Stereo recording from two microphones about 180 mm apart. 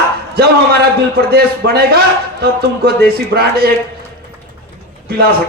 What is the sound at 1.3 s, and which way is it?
Music, 60° right (ahead or behind).